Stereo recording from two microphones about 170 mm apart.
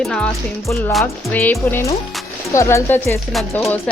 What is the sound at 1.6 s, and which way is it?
Speech, 10° left (ahead or behind).